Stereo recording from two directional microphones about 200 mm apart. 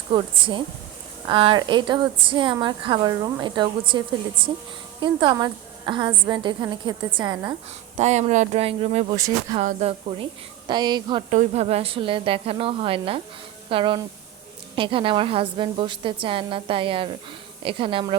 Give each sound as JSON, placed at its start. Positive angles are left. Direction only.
{"t": 0.1, "sound": "a woman's voice", "side_deg": -25}
{"t": 7.9, "sound": "speech", "side_deg": -35}
{"t": 9.1, "sound": "speech", "side_deg": -15}
{"t": 9.6, "sound": "a woman's voice", "side_deg": -30}
{"t": 11.3, "sound": "a woman's voice", "side_deg": -35}